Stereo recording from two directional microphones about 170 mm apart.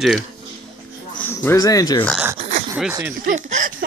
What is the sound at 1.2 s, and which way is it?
Speech, 15° left (ahead or behind).